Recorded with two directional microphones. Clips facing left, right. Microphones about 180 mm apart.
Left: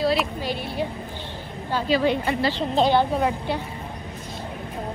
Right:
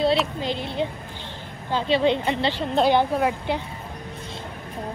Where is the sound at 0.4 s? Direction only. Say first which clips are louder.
Right 1 dB; 20° right (ahead or behind).